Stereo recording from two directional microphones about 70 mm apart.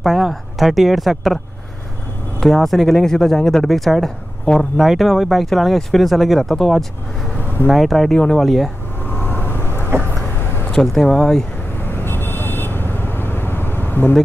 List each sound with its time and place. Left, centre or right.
0.0 s speech: centre
2.4 s speech: centre
9.0 s vehicle: left
9.8 s a sound: right
10.7 s speech: centre
11.9 s vehicle: left